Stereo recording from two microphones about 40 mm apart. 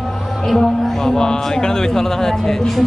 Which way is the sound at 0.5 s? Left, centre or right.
Centre.